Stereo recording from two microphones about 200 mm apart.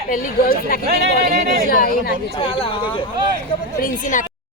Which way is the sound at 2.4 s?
25° left (ahead or behind).